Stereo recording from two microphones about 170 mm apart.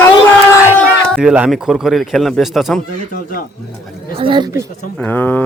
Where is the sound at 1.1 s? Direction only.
5° right (ahead or behind).